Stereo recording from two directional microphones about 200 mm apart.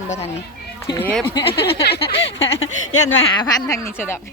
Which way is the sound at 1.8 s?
55° left (ahead or behind).